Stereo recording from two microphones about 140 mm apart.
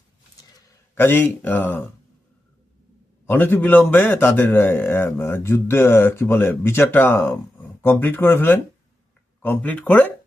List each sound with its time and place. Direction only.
0.9 s speech: 15° left (ahead or behind)
3.2 s speech: 15° left (ahead or behind)